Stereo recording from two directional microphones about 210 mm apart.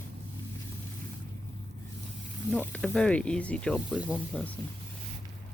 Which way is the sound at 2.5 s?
5° left (ahead or behind).